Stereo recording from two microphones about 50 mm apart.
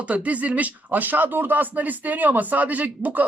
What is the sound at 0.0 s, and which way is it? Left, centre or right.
Speech, right.